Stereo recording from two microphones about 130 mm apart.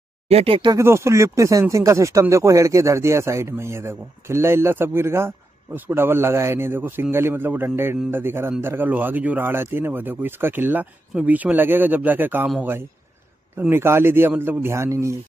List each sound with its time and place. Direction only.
0.3 s speech: 45° right (ahead or behind)
0.7 s a man's voice: 20° right (ahead or behind)
13.6 s a man's voice: 20° right (ahead or behind)